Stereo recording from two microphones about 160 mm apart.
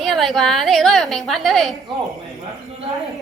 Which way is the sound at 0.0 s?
Centre (ahead or behind).